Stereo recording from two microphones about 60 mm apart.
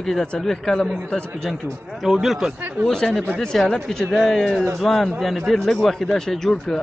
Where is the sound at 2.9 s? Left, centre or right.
Centre.